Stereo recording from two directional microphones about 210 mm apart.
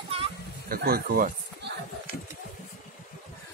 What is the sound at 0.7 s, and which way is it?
Speech, 45° right (ahead or behind).